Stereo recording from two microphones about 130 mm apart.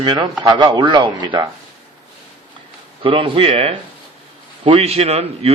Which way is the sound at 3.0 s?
40° right (ahead or behind).